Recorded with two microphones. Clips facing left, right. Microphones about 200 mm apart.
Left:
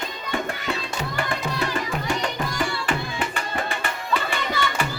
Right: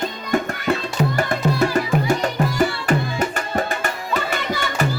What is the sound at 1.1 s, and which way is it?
Music, 40° right (ahead or behind).